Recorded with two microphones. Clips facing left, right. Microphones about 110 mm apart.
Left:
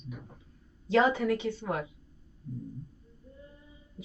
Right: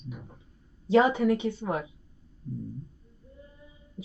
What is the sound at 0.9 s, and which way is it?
Speech, 20° right (ahead or behind).